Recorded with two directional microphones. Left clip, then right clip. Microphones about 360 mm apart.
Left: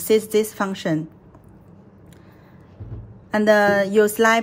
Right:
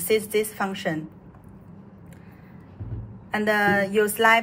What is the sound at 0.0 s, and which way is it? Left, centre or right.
Speech, left.